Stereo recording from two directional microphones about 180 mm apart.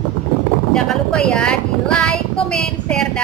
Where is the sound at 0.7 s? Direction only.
5° left (ahead or behind).